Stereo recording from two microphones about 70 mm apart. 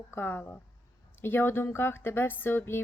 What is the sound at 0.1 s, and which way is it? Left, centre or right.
Speech, left.